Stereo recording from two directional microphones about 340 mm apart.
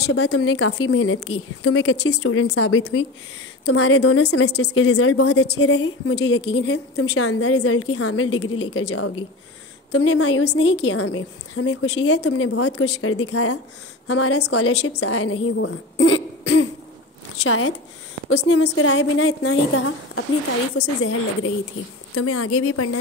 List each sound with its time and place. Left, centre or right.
0.0 s a woman's voice: left
22.1 s a woman's voice: left